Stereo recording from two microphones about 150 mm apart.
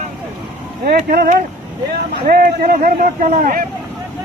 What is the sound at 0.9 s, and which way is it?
Speech, 90° right.